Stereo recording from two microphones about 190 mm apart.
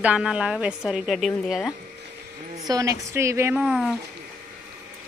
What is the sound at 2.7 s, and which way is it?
Speech, 15° right (ahead or behind).